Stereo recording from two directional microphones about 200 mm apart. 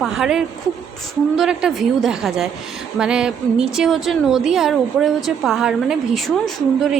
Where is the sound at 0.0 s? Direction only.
Centre (ahead or behind).